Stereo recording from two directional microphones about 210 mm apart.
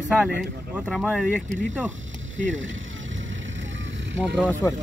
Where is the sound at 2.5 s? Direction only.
65° right (ahead or behind).